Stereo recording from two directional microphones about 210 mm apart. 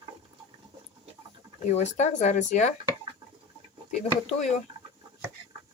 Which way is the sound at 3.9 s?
35° left (ahead or behind).